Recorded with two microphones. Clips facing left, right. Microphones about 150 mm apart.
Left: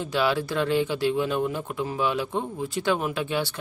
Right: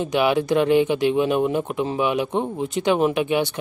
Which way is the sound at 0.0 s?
20° right (ahead or behind).